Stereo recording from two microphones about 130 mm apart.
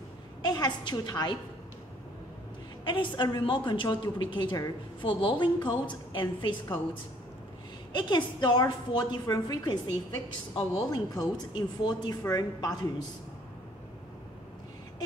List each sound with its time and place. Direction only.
0.4 s a woman's voice: 30° left (ahead or behind)
2.8 s a woman's voice: 40° left (ahead or behind)
7.9 s a woman's voice: 40° left (ahead or behind)